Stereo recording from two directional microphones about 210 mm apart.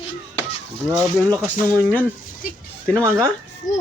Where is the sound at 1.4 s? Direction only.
5° right (ahead or behind).